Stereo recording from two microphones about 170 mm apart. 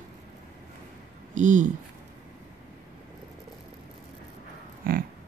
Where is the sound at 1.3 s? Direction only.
45° right (ahead or behind).